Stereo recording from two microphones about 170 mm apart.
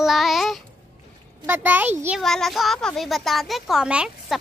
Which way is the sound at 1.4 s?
10° right (ahead or behind).